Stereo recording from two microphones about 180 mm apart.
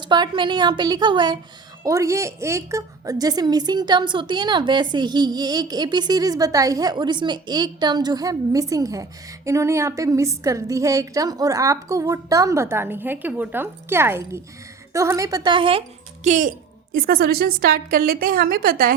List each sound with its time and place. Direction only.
0.0 s a woman's voice: 25° right (ahead or behind)
16.2 s speech: 40° right (ahead or behind)
16.9 s a woman's voice: 55° right (ahead or behind)